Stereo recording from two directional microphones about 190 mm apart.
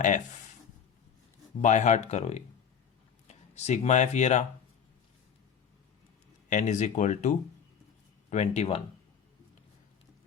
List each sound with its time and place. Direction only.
1.6 s speech: 40° left (ahead or behind)
6.5 s speech: 40° left (ahead or behind)